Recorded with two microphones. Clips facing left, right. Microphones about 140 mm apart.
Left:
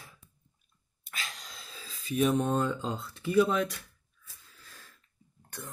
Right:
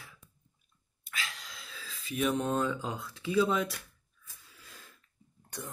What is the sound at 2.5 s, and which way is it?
Speech, centre (ahead or behind).